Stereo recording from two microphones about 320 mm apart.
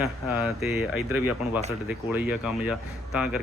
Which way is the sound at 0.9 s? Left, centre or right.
Left.